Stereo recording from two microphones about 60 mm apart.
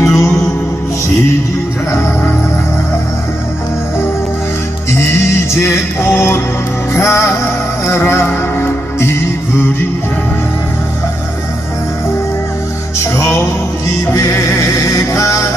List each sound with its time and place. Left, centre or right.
0.0 s music: left
1.9 s music: left
5.0 s music: left
13.0 s music: left